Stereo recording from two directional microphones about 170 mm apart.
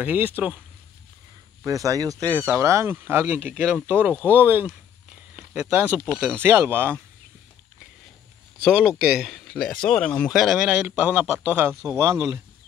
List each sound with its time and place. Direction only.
0.0 s speech: 10° right (ahead or behind)
1.6 s speech: 20° right (ahead or behind)
8.6 s speech: 5° right (ahead or behind)
11.9 s speech: 15° right (ahead or behind)